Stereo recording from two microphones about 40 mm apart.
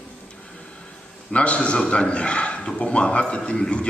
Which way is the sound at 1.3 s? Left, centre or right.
Left.